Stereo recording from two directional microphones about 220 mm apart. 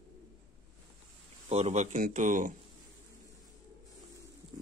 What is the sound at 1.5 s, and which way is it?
Speech, 30° right (ahead or behind).